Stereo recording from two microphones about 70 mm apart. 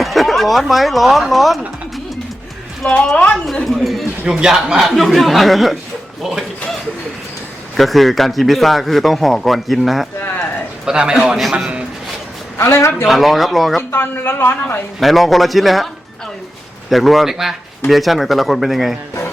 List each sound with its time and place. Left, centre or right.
0.0 s speech: centre
2.8 s a woman's voice: centre
7.8 s a man's voice: centre
10.8 s a man's voice: centre
11.6 s a sound: centre
12.5 s a woman's voice: left
13.1 s a man's voice: centre
13.9 s speech: left
15.0 s a man's voice: centre
16.9 s a man's voice: centre